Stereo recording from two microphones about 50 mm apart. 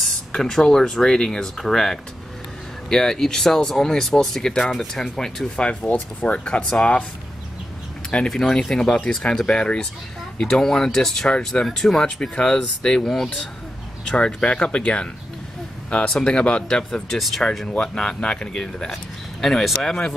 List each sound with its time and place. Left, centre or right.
0.0 s speech: centre
5.6 s speech: left
8.3 s speech: centre
16.1 s speech: centre
17.6 s speech: centre
19.4 s speech: centre